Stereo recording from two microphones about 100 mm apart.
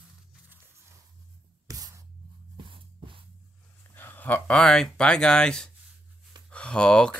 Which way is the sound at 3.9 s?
20° left (ahead or behind).